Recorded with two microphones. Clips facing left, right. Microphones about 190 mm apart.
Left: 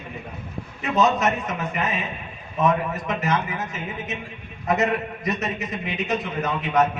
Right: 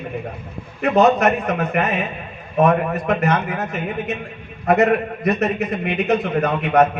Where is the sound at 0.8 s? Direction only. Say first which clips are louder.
Right 6 dB; 60° right (ahead or behind).